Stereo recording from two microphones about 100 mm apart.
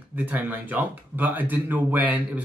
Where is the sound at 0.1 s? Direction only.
15° right (ahead or behind).